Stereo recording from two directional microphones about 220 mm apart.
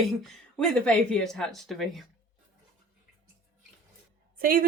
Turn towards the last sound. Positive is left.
turn(degrees=-40)  # may be behind; listen again after turning